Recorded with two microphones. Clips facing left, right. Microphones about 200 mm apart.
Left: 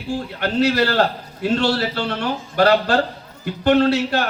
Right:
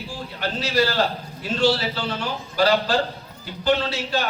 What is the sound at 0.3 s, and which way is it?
A man's voice, 60° left (ahead or behind).